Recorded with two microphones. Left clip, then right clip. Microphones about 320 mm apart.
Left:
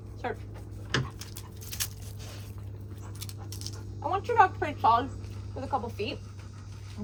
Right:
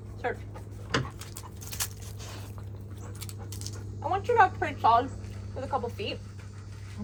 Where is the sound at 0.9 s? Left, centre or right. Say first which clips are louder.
Right 1 dB; centre.